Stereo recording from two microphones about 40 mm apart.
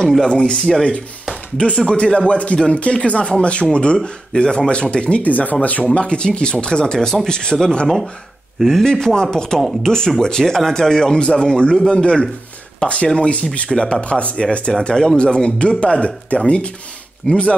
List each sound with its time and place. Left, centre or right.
0.3 s speech: left
0.6 s speech: centre
1.6 s speech: left
5.2 s speech: left
5.9 s speech: left
8.8 s speech: centre